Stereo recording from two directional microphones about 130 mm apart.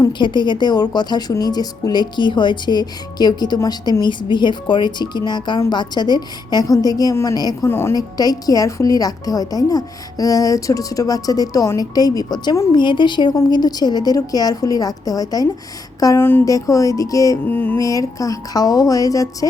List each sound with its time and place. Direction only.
0.0 s a woman's voice: 35° left (ahead or behind)
16.0 s a sound: 30° left (ahead or behind)
16.2 s a woman's voice: 20° left (ahead or behind)